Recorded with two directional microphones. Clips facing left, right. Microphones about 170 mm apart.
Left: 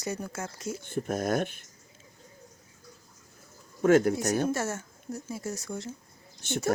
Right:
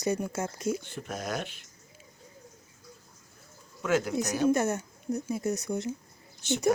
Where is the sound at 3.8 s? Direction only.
50° left (ahead or behind).